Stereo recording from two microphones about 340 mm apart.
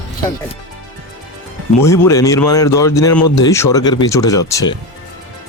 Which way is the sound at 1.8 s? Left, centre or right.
Centre.